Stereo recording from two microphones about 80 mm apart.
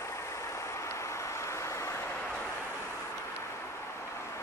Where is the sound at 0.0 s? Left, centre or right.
Left.